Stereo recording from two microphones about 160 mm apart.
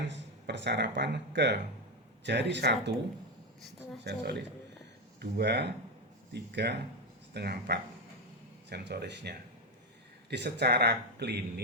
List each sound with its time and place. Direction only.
0.0 s speech: 90° right
4.0 s speech: 90° right